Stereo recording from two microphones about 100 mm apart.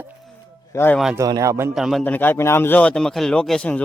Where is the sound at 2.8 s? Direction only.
10° left (ahead or behind).